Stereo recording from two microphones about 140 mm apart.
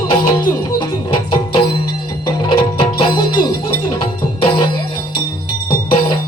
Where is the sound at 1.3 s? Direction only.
35° left (ahead or behind).